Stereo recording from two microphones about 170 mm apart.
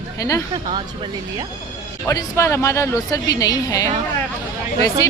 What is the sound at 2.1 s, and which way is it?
Speech, 15° left (ahead or behind).